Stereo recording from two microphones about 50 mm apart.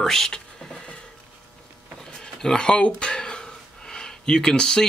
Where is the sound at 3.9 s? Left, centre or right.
Centre.